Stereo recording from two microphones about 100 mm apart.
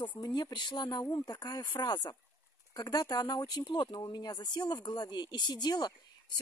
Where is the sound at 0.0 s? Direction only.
50° left (ahead or behind).